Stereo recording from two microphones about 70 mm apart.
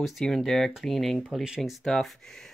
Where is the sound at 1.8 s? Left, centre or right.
Centre.